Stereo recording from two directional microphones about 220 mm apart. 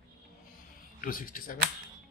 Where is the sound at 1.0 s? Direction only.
40° left (ahead or behind).